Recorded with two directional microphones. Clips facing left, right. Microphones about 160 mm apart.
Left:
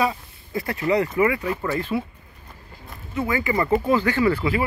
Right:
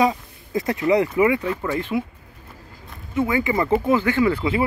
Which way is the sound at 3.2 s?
20° right (ahead or behind).